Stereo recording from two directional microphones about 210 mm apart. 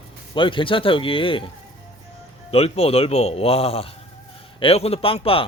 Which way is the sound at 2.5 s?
30° left (ahead or behind).